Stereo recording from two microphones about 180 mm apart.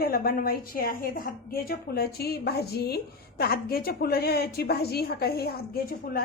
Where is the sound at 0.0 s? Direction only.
55° left (ahead or behind).